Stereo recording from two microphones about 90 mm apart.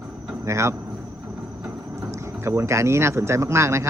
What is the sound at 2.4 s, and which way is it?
Speech, 30° right (ahead or behind).